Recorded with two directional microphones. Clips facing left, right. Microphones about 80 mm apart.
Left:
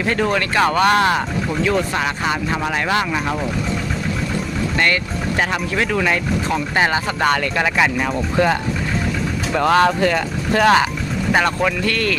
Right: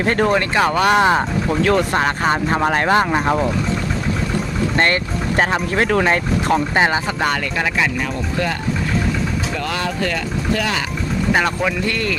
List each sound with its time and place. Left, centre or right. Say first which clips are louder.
0.0 s speech: right 2 dB; right
0.7 s speech: even; centre
1.6 s speech: right 3 dB; right
5.4 s speech: right 3 dB; right
6.7 s speech: left 2 dB; right
7.2 s speech: left 2 dB; centre
9.6 s speech: left 13 dB; left
10.0 s speech: left 3 dB; left
10.6 s speech: left 8 dB; left
11.3 s speech: left 3 dB; centre
11.9 s speech: left 1 dB; centre